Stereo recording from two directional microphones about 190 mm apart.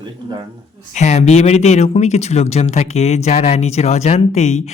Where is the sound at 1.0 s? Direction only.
35° left (ahead or behind).